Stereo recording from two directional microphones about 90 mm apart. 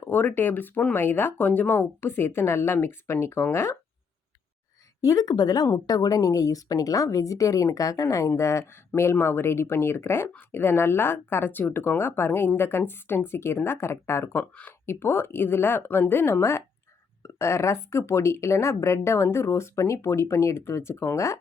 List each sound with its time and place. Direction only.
0.0 s a woman's voice: 20° left (ahead or behind)
4.9 s a woman's voice: 40° left (ahead or behind)